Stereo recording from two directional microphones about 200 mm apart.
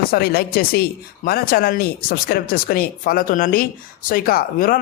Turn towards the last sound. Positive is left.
turn(degrees=45)  # may be behind; listen again after turning